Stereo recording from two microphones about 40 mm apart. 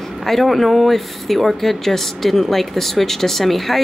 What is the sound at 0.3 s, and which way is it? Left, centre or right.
Speech, centre.